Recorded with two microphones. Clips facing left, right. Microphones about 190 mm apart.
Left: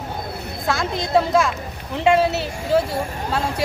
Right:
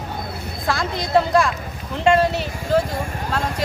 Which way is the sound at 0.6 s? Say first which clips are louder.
Left 1 dB; centre (ahead or behind).